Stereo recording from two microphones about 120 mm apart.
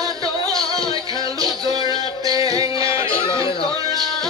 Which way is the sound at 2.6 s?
45° left (ahead or behind).